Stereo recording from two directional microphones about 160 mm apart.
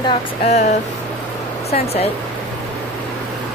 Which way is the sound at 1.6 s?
40° left (ahead or behind).